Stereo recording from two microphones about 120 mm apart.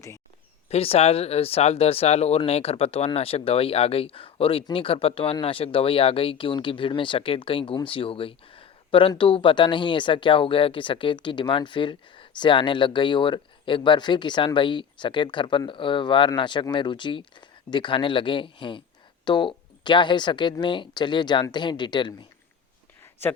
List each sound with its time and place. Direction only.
0.7 s speech: 55° left (ahead or behind); by 22.3 s 40° left (ahead or behind)